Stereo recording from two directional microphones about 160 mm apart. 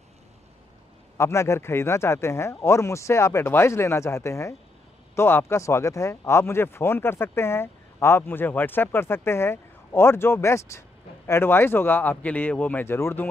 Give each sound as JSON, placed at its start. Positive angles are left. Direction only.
{"t": 1.1, "sound": "speech", "side_deg": 15}